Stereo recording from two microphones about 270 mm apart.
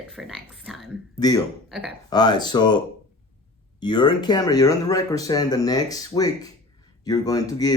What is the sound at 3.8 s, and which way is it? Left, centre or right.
Speech, centre.